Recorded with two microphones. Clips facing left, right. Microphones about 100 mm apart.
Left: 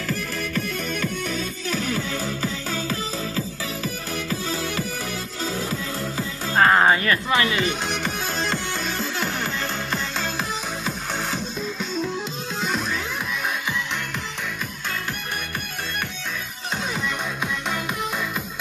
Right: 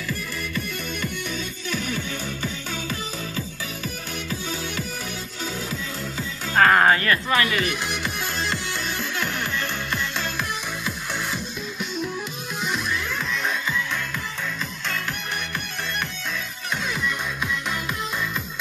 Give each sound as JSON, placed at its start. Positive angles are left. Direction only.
{"t": 0.1, "sound": "music", "side_deg": 65}
{"t": 1.7, "sound": "music", "side_deg": 40}
{"t": 6.6, "sound": "music", "side_deg": 15}
{"t": 12.6, "sound": "music", "side_deg": 40}
{"t": 17.0, "sound": "music", "side_deg": 20}